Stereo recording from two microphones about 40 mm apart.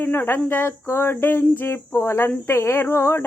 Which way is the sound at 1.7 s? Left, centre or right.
Left.